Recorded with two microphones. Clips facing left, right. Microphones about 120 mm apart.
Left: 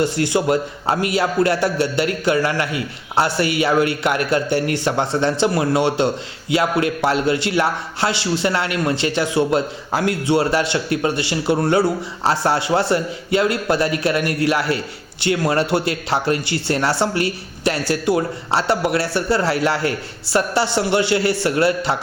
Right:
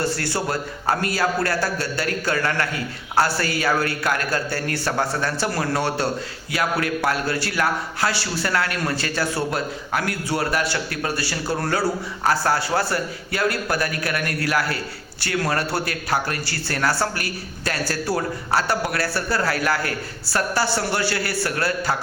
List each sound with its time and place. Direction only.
0.0 s a man's voice: 20° left (ahead or behind)